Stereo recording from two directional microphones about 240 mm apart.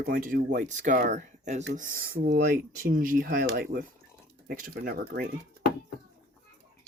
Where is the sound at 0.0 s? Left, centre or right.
Right.